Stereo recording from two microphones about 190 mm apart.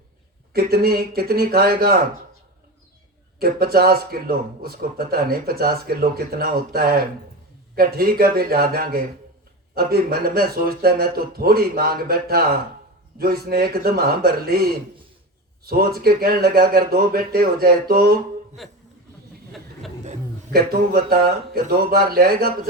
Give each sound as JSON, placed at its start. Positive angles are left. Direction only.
{"t": 0.5, "sound": "speech", "side_deg": -55}
{"t": 3.3, "sound": "speech", "side_deg": -55}
{"t": 18.6, "sound": "speech", "side_deg": 0}
{"t": 20.5, "sound": "speech", "side_deg": -55}